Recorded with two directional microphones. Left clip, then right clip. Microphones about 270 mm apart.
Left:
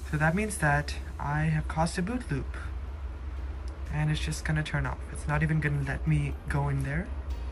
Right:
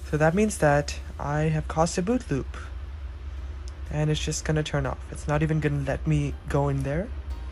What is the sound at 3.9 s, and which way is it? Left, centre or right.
Speech, centre.